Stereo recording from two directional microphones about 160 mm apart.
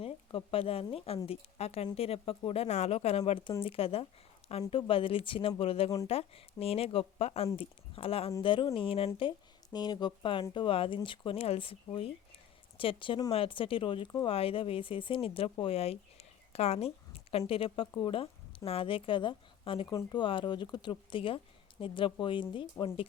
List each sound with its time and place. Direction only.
0.0 s a woman's voice: 35° left (ahead or behind)